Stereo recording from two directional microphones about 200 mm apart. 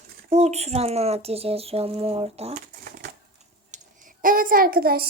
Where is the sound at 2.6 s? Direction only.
45° right (ahead or behind).